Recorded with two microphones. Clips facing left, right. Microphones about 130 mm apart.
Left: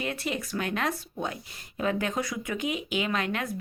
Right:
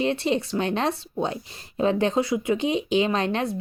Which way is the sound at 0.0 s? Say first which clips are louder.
Right 8 dB; 30° right (ahead or behind).